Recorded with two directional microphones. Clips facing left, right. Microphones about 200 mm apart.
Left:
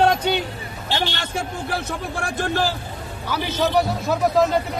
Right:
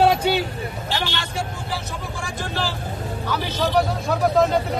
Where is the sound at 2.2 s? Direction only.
60° left (ahead or behind).